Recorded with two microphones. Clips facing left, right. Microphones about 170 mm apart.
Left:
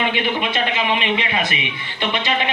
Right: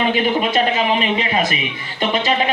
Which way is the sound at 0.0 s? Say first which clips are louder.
Right 4 dB; 40° right (ahead or behind).